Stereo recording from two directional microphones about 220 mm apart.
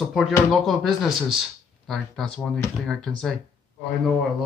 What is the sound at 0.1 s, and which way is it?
Speech, centre (ahead or behind).